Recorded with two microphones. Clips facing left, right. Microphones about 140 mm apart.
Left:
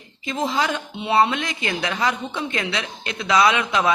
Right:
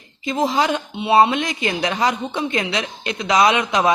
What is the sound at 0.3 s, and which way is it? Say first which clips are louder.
A woman's voice: right 4 dB; 15° right (ahead or behind).